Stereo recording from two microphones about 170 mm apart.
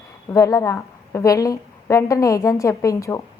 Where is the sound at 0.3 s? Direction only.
20° left (ahead or behind).